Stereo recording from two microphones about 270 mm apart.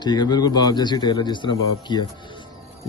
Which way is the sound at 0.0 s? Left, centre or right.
Centre.